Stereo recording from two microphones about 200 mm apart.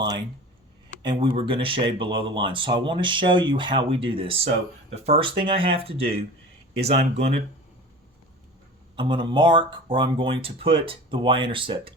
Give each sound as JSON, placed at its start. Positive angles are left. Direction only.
{"t": 0.0, "sound": "speech", "side_deg": -20}
{"t": 9.0, "sound": "speech", "side_deg": -25}